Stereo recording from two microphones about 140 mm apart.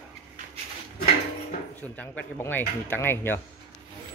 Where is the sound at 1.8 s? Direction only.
10° left (ahead or behind).